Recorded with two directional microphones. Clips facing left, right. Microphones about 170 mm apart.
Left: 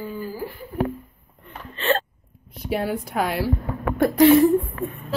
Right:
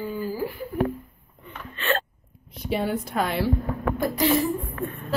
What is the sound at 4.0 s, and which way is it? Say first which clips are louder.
Speech: left 9 dB; 60° left (ahead or behind).